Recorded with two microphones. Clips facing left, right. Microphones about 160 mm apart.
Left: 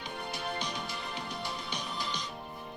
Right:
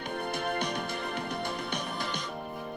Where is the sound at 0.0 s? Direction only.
55° right (ahead or behind).